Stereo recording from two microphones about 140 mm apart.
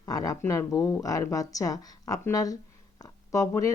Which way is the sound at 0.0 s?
25° left (ahead or behind).